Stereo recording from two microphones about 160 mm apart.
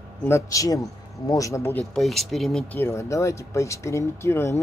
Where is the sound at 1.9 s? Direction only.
Centre (ahead or behind).